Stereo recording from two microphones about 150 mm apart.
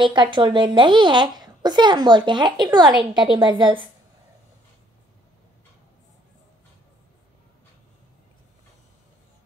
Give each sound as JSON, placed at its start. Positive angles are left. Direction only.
{"t": 0.0, "sound": "speech", "side_deg": -30}